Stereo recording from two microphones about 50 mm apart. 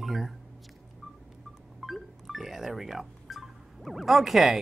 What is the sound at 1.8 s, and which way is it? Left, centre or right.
Speech, centre.